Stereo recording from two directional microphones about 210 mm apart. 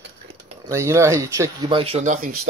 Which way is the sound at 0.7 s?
15° right (ahead or behind).